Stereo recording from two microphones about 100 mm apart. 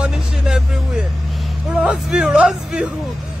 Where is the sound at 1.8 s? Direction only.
10° right (ahead or behind).